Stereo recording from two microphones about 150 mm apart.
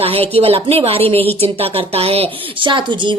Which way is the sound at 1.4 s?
40° right (ahead or behind).